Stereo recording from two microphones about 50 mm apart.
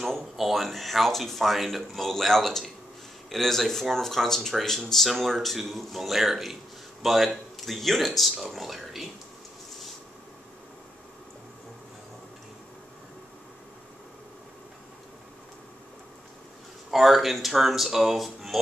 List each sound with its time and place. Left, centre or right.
0.4 s speech: centre
16.9 s speech: centre